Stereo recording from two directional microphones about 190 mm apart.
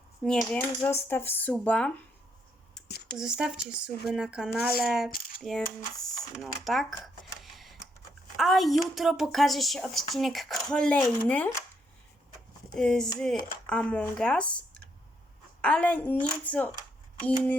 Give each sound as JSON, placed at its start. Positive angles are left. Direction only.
{"t": 0.2, "sound": "a woman's voice", "side_deg": 5}
{"t": 3.2, "sound": "a woman's voice", "side_deg": -5}
{"t": 5.1, "sound": "a sound", "side_deg": 50}
{"t": 5.4, "sound": "speech", "side_deg": 0}
{"t": 6.7, "sound": "a sound", "side_deg": 0}
{"t": 8.4, "sound": "a woman's voice", "side_deg": 0}
{"t": 12.7, "sound": "a woman's voice", "side_deg": 5}